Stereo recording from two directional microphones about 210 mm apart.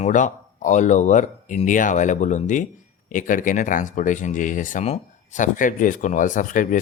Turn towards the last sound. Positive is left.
turn(degrees=40)  # may be behind; listen again after turning